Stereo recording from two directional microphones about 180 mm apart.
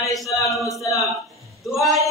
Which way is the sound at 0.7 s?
15° left (ahead or behind).